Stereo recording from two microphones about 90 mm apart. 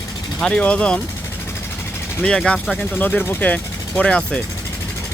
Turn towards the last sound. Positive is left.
turn(degrees=10)  # may be behind; listen again after turning